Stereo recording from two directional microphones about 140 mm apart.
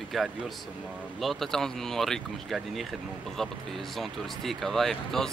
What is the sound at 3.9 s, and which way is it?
Speech, centre (ahead or behind).